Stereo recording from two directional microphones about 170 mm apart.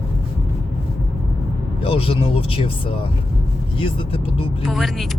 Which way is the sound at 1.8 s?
35° left (ahead or behind).